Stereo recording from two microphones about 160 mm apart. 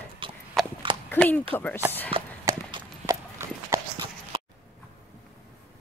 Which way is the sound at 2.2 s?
35° right (ahead or behind).